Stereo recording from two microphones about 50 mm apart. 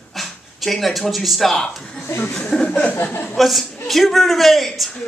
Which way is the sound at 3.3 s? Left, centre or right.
Centre.